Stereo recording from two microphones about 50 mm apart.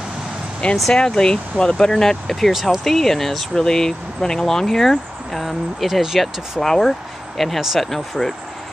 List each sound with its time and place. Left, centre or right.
0.6 s speech: left; by 8.4 s centre